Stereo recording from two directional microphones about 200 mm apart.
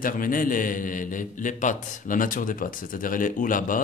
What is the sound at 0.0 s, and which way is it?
A man's voice, 45° left (ahead or behind).